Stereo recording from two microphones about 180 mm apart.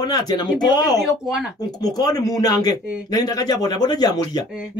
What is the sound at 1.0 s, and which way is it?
Speech, centre (ahead or behind).